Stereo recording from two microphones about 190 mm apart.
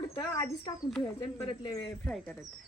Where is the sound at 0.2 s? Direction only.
20° left (ahead or behind).